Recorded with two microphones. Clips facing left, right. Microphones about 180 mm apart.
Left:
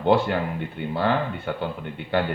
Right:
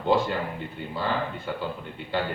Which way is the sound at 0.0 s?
60° left (ahead or behind).